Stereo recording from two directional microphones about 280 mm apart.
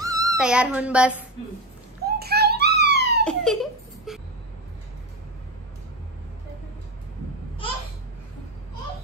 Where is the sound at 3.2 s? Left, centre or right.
Centre.